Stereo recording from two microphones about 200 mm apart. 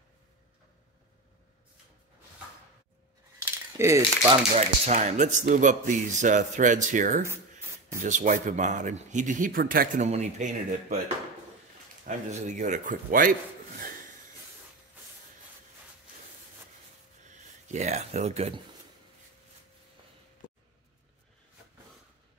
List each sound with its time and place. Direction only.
3.7 s speech: 15° right (ahead or behind)
4.6 s speech: 35° right (ahead or behind)
10.0 s speech: 35° right (ahead or behind)
12.1 s speech: 35° right (ahead or behind)
17.3 s speech: 35° right (ahead or behind)